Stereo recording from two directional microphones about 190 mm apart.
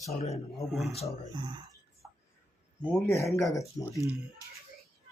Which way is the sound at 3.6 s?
15° left (ahead or behind).